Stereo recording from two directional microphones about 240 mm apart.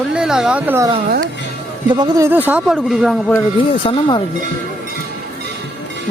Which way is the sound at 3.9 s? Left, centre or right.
Centre.